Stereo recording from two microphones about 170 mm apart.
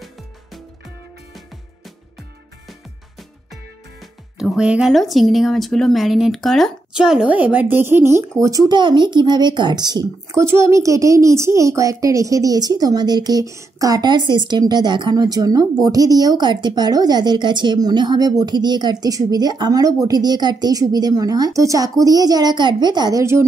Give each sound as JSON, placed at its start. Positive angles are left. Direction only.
{"t": 4.4, "sound": "speech", "side_deg": -5}